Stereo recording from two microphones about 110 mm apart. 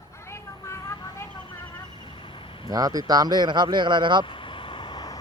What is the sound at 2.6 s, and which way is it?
Speech, 35° right (ahead or behind).